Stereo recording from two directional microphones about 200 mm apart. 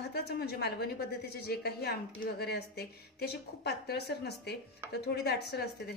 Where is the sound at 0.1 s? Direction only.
55° left (ahead or behind).